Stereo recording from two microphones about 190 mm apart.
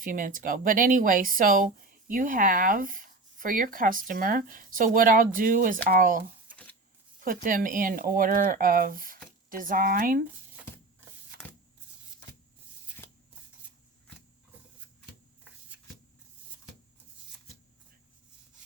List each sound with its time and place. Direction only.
0.0 s speech: 45° right (ahead or behind)
7.4 s speech: 45° right (ahead or behind)
13.0 s a sound: 15° left (ahead or behind)